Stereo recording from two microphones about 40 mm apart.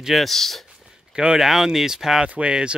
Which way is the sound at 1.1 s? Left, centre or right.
Centre.